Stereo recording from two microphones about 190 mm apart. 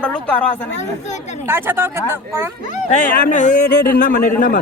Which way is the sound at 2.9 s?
40° left (ahead or behind).